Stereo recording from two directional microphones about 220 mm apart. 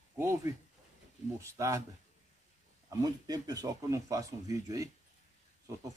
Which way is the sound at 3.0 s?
15° right (ahead or behind).